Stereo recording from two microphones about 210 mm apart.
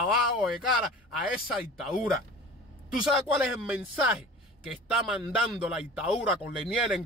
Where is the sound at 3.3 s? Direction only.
5° right (ahead or behind).